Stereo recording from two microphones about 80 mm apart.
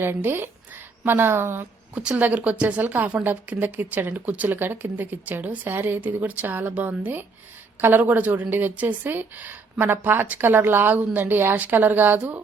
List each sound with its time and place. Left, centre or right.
0.0 s a woman's voice: right
2.0 s a woman's voice: centre